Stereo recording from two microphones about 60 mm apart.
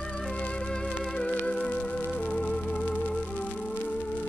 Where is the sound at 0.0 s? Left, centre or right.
Centre.